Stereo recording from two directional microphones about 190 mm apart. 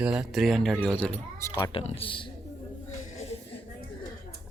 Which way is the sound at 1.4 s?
15° left (ahead or behind).